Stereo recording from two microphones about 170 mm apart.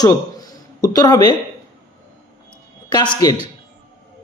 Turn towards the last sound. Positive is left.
turn(degrees=20)  # may be behind; listen again after turning